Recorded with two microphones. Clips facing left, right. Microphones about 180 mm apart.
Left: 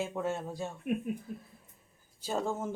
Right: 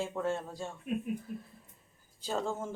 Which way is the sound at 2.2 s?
15° left (ahead or behind).